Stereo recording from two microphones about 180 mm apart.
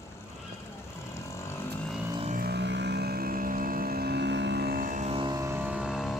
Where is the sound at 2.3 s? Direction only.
60° right (ahead or behind).